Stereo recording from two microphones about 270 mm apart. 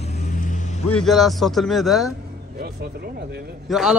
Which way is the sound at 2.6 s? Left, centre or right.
Right.